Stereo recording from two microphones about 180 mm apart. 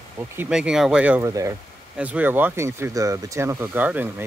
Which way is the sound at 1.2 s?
15° right (ahead or behind).